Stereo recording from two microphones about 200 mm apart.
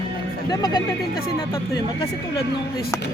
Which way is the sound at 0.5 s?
20° left (ahead or behind).